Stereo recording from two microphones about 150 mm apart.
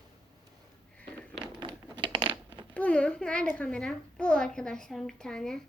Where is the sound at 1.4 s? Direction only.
30° right (ahead or behind).